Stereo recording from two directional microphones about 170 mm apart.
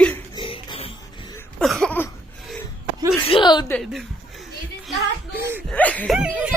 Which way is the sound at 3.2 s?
30° left (ahead or behind).